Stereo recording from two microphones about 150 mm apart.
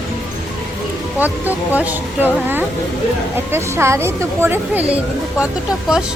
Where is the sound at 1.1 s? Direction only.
10° right (ahead or behind).